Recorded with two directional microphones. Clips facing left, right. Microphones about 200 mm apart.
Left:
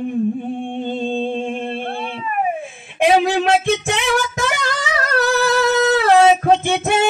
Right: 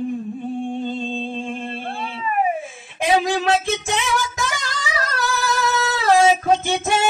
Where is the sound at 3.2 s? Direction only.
60° left (ahead or behind).